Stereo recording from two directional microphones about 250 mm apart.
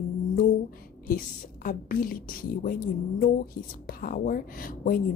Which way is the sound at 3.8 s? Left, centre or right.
Left.